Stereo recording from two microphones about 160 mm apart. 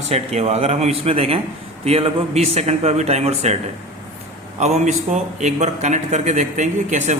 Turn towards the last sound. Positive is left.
turn(degrees=-50)  # may be behind; listen again after turning